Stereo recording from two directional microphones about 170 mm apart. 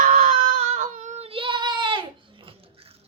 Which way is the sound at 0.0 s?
45° right (ahead or behind).